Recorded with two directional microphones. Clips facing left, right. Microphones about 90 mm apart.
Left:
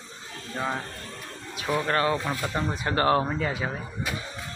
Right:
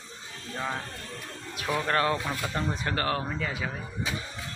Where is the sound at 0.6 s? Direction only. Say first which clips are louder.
Left 3 dB; 15° left (ahead or behind).